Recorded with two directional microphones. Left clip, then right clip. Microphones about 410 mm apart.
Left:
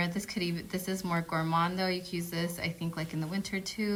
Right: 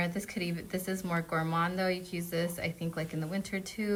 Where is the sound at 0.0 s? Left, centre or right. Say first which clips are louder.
Left 1 dB; centre.